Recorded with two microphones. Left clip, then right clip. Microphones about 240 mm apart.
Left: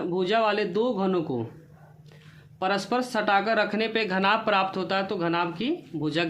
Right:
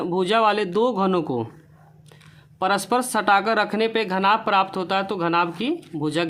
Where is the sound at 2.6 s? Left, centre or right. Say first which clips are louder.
Right 5 dB; right.